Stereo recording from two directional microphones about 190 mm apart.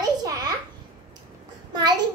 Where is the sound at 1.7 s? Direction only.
20° right (ahead or behind).